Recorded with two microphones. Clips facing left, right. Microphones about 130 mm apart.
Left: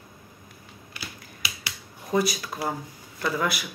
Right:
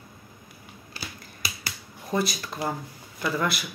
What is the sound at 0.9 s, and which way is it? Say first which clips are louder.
Finger snapping: right 1 dB; 40° right (ahead or behind).